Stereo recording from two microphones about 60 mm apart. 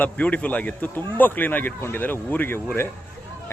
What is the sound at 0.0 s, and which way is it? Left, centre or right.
Speech, left.